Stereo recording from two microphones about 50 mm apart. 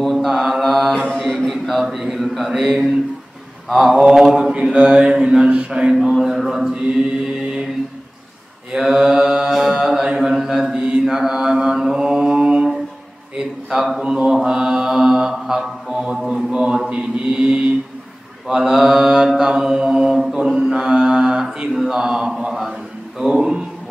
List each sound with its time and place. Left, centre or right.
0.0 s mantra: centre
0.9 s mantra: centre
1.2 s a man's voice: centre
3.7 s mantra: centre
6.0 s a sound: centre
6.6 s mantra: right
8.7 s mantra: centre